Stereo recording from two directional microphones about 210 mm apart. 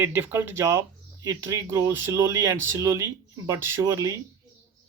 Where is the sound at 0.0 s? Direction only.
10° right (ahead or behind).